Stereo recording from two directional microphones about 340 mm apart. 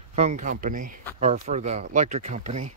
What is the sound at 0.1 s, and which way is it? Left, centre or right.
Speech, centre.